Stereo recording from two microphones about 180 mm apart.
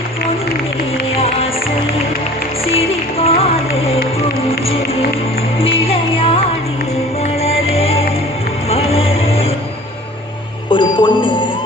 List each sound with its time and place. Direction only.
2.7 s music: 35° left (ahead or behind)
5.5 s music: 30° left (ahead or behind)
10.7 s bicycle bell: 25° left (ahead or behind)